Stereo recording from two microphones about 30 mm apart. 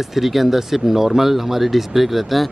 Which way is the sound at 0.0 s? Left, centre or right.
Centre.